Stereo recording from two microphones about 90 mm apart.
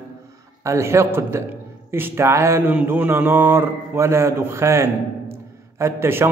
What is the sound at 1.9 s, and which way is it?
Speech, 25° right (ahead or behind).